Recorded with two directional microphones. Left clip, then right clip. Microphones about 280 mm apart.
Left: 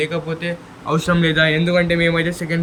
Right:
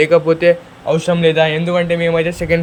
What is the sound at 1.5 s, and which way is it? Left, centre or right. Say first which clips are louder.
Speech: right 1 dB; centre.